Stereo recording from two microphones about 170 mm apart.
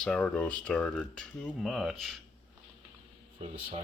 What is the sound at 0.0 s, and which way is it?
Speech, 5° left (ahead or behind).